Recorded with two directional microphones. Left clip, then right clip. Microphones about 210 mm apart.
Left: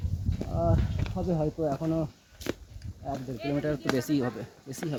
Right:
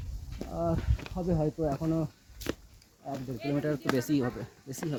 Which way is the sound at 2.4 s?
20° right (ahead or behind).